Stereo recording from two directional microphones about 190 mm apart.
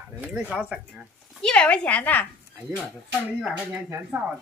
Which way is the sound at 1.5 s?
5° left (ahead or behind).